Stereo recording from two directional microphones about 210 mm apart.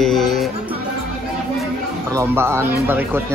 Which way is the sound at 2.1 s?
10° right (ahead or behind).